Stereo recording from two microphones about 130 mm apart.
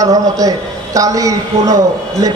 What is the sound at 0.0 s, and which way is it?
A man's voice, 25° right (ahead or behind).